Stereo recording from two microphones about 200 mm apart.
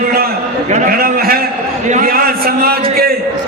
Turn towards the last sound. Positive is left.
turn(degrees=-50)  # may be behind; listen again after turning